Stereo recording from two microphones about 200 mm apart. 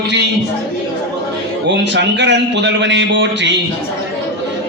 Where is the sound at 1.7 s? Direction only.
60° right (ahead or behind).